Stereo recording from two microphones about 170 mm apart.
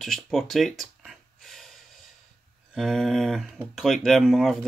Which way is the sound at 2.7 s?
Centre (ahead or behind).